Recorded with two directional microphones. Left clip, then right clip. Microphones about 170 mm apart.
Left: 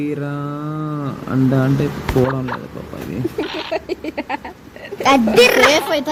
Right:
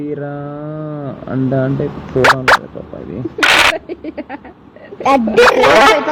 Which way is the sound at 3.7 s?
45° left (ahead or behind).